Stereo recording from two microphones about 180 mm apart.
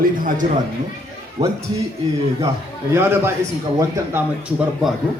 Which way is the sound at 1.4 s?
35° right (ahead or behind).